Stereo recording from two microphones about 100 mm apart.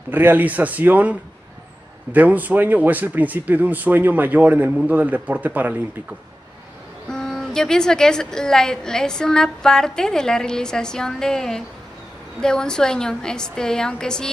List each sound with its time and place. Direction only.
0.1 s speech: 20° right (ahead or behind)
2.1 s speech: 15° right (ahead or behind)
7.1 s a woman's voice: 5° left (ahead or behind)